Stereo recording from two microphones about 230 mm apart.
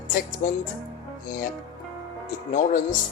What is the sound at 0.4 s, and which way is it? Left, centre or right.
Speech, left.